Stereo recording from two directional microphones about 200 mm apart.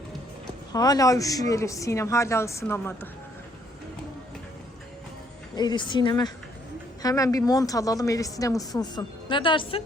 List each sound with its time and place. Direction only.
0.7 s a woman's voice: 20° left (ahead or behind)
5.5 s a woman's voice: 20° left (ahead or behind)